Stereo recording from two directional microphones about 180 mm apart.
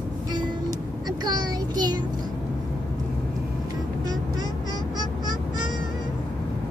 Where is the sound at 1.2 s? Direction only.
25° right (ahead or behind).